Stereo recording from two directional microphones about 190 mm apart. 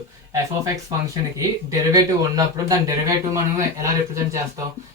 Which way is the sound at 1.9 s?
20° right (ahead or behind).